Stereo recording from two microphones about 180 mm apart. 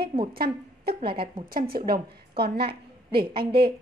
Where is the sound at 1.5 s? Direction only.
55° right (ahead or behind).